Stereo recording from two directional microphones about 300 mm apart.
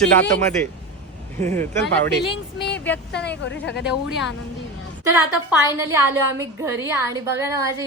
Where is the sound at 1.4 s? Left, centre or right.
Centre.